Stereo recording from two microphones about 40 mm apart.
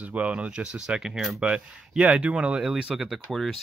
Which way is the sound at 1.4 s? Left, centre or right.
Right.